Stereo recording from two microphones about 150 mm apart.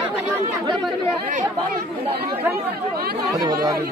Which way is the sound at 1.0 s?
60° right (ahead or behind).